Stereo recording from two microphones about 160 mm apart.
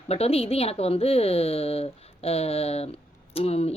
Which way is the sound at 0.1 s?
40° left (ahead or behind).